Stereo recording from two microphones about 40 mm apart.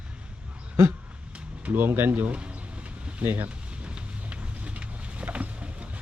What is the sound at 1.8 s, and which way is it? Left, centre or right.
Speech, right.